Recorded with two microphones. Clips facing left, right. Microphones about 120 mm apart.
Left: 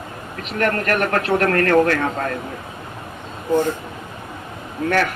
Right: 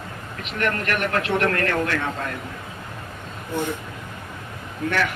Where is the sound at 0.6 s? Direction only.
40° left (ahead or behind).